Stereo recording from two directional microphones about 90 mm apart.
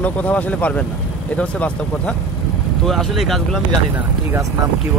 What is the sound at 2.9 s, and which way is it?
Speech, centre (ahead or behind).